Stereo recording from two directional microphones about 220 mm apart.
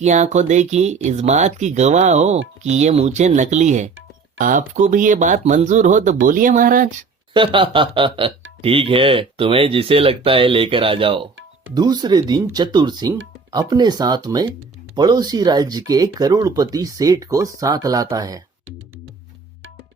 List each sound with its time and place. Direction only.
0.0 s speech: 30° right (ahead or behind)
7.3 s speech: 20° right (ahead or behind)